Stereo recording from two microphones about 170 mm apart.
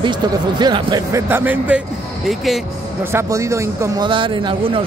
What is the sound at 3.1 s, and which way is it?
Speech, 15° right (ahead or behind).